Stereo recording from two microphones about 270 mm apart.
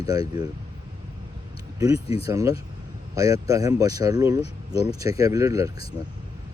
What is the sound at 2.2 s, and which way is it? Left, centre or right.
Speech, centre.